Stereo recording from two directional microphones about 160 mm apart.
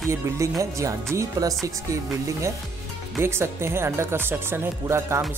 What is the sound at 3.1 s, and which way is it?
Speech, 15° right (ahead or behind).